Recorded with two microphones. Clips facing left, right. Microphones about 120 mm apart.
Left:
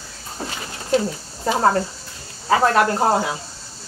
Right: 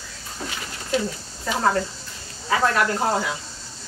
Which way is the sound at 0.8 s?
35° left (ahead or behind).